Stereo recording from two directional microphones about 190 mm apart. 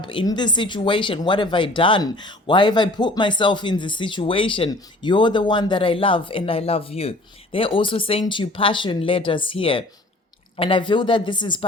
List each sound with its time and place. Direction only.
0.0 s speech: 25° left (ahead or behind)